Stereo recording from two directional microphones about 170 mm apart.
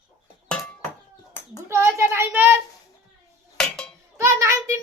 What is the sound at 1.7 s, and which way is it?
Child singing, 15° right (ahead or behind).